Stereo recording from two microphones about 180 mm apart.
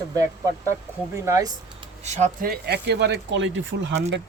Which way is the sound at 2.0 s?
45° right (ahead or behind).